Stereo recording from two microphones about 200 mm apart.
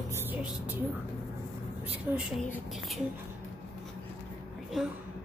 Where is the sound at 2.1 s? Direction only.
10° right (ahead or behind).